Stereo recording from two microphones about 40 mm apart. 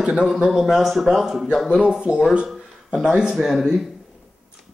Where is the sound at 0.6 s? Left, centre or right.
Centre.